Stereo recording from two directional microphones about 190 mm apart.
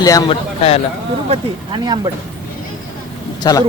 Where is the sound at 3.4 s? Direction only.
20° left (ahead or behind).